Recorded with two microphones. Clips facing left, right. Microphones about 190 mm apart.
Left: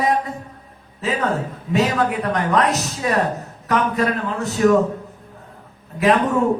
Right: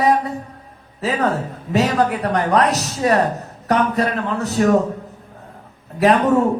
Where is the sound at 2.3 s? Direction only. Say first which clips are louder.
Right 2 dB; 40° right (ahead or behind).